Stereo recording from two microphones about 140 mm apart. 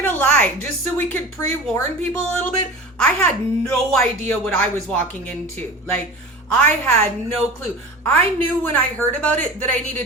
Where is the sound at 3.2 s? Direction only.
10° left (ahead or behind).